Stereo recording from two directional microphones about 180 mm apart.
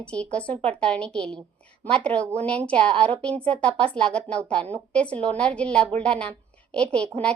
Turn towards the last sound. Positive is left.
turn(degrees=5)  # may be behind; listen again after turning